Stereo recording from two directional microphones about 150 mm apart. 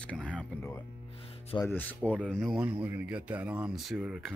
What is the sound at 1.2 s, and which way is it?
Music, 40° left (ahead or behind).